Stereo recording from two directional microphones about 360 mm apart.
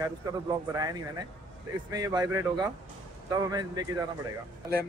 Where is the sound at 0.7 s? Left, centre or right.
Centre.